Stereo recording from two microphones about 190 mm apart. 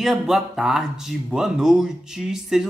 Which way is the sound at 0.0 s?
Centre (ahead or behind).